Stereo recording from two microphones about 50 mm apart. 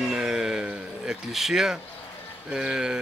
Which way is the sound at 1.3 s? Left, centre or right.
Centre.